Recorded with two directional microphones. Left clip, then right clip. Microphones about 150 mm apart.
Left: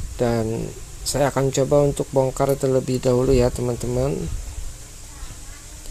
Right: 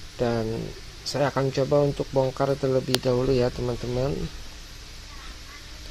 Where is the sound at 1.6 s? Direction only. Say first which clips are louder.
Left 4 dB; 10° left (ahead or behind).